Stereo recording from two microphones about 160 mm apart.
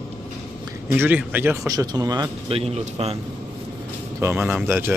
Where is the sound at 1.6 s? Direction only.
25° right (ahead or behind).